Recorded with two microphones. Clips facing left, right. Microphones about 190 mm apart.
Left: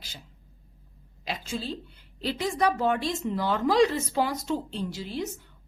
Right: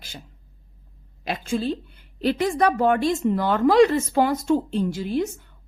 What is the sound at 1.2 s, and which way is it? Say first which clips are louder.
A woman's voice: right 8 dB; 55° right (ahead or behind).